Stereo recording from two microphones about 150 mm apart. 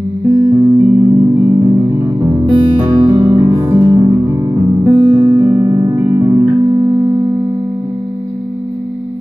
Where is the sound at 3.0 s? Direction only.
30° right (ahead or behind).